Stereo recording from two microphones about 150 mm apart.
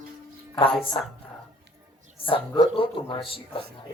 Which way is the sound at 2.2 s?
30° left (ahead or behind).